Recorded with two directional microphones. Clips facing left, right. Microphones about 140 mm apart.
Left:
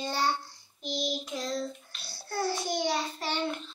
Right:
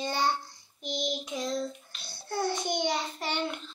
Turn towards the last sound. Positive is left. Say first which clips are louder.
# left 1 dB
turn(degrees=0)  # may be behind; listen again after turning